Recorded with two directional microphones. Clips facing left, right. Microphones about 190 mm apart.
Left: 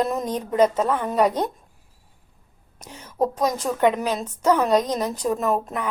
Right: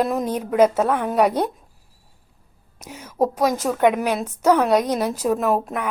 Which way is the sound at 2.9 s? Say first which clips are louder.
Right 2 dB; 10° right (ahead or behind).